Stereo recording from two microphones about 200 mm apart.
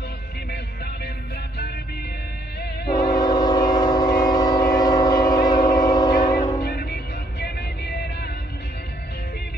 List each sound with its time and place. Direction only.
2.9 s train: 20° left (ahead or behind)
6.2 s music: 20° left (ahead or behind)
6.6 s music: 50° left (ahead or behind)